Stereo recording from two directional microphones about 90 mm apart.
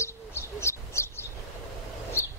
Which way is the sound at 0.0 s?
30° left (ahead or behind).